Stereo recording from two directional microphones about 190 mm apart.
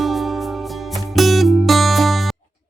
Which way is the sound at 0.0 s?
Centre (ahead or behind).